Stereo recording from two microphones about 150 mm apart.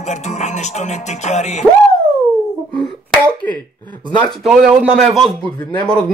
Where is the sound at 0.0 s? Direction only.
50° left (ahead or behind).